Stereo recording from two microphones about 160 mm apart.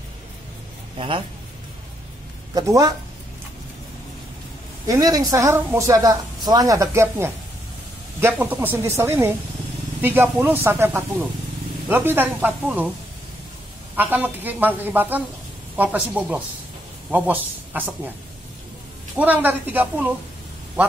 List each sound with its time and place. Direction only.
0.9 s speech: 30° right (ahead or behind)
2.5 s a woman's voice: 20° right (ahead or behind)
4.8 s a woman's voice: 20° right (ahead or behind)
13.9 s a woman's voice: 10° right (ahead or behind)
19.1 s a woman's voice: 10° right (ahead or behind)